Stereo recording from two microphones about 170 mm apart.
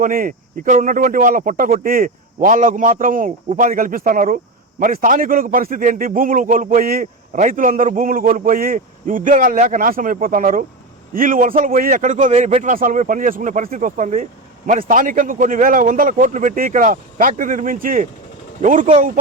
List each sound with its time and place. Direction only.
0.0 s a man's voice: 55° right (ahead or behind)
12.7 s a man's voice: 50° right (ahead or behind)